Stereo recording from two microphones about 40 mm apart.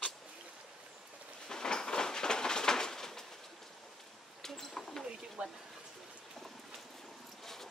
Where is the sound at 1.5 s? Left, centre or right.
Centre.